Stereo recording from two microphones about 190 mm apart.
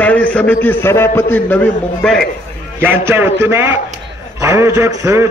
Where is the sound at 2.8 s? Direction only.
10° right (ahead or behind).